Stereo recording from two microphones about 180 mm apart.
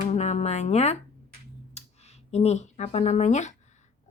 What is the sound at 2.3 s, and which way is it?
Speech, 40° left (ahead or behind).